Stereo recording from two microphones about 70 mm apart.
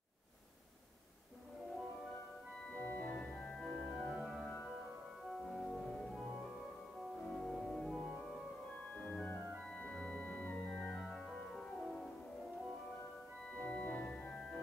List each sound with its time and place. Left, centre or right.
2.7 s organ: left
4.1 s organ: centre
5.4 s music: centre
7.3 s organ: centre
11.1 s music: centre
13.6 s organ: centre